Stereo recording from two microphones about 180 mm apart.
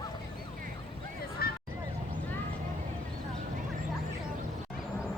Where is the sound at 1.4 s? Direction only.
55° left (ahead or behind).